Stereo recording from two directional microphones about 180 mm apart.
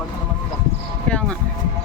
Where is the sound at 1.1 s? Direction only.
5° left (ahead or behind).